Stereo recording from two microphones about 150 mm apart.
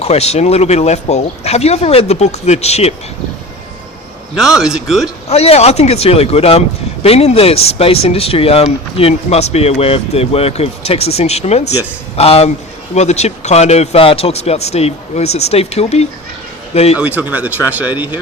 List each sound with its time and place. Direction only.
0.0 s speech: 45° left (ahead or behind)
4.4 s speech: 5° right (ahead or behind)
5.3 s speech: 45° left (ahead or behind)
17.0 s speech: 10° right (ahead or behind)